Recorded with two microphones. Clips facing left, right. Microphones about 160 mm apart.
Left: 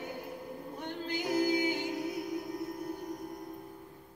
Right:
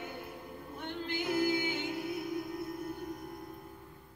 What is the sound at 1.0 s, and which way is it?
Music, 40° left (ahead or behind).